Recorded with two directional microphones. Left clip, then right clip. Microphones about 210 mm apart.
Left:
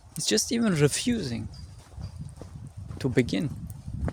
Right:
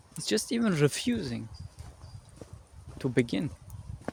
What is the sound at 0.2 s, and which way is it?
Speech, 15° left (ahead or behind).